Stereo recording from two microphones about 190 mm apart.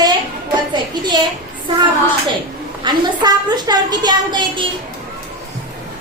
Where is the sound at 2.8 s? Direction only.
20° right (ahead or behind).